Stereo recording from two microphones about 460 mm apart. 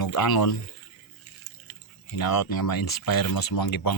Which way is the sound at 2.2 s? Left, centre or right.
Left.